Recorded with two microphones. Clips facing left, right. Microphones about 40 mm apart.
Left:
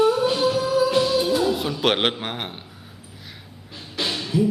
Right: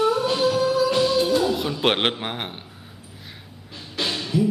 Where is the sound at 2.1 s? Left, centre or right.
Centre.